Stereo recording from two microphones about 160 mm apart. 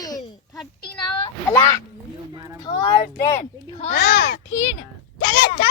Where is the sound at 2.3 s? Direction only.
20° right (ahead or behind).